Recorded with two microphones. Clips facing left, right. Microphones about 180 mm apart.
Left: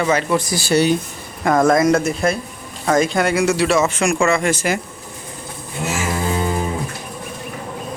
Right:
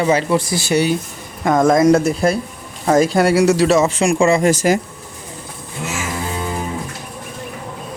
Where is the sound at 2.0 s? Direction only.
35° right (ahead or behind).